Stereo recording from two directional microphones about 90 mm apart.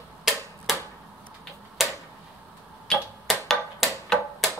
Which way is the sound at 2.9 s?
5° left (ahead or behind).